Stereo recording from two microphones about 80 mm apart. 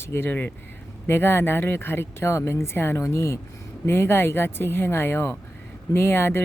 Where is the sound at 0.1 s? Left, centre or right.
Left.